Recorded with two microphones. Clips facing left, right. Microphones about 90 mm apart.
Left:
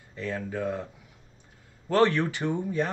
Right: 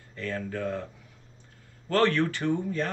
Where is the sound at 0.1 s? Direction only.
15° left (ahead or behind).